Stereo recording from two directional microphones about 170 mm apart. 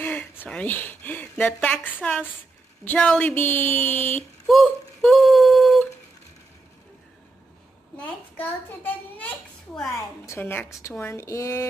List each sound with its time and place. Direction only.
0.0 s a woman's voice: 10° left (ahead or behind)
4.5 s a sound: centre (ahead or behind)
8.0 s a woman's voice: 10° left (ahead or behind)